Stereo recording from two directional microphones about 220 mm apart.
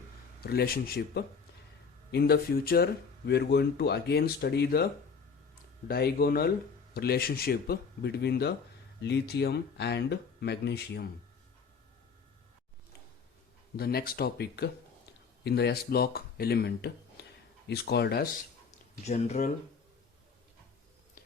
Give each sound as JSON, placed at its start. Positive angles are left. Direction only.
{"t": 0.4, "sound": "speech", "side_deg": 45}
{"t": 5.9, "sound": "speech", "side_deg": 45}
{"t": 13.7, "sound": "speech", "side_deg": 45}
{"t": 17.2, "sound": "a sound", "side_deg": 45}
{"t": 17.7, "sound": "speech", "side_deg": 45}
{"t": 19.0, "sound": "speech", "side_deg": 30}